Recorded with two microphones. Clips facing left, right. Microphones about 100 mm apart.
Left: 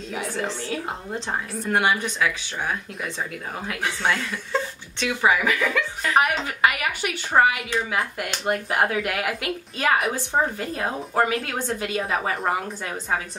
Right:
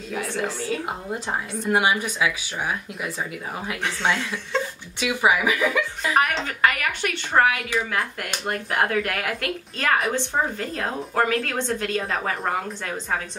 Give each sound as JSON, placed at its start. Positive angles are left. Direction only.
{"t": 0.1, "sound": "a woman's voice", "side_deg": 0}
{"t": 5.0, "sound": "speech", "side_deg": -10}
{"t": 6.1, "sound": "a woman's voice", "side_deg": 5}